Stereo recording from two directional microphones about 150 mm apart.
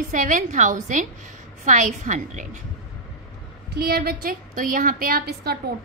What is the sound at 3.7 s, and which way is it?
A woman's voice, 90° right.